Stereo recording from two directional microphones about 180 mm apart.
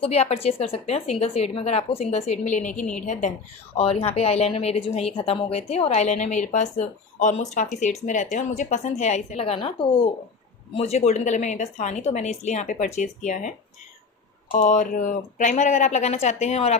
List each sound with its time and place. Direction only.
0.0 s a woman's voice: 35° left (ahead or behind)
14.5 s a woman's voice: 45° left (ahead or behind)